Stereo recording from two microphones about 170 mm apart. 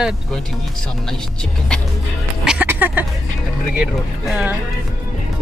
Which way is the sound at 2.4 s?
5° right (ahead or behind).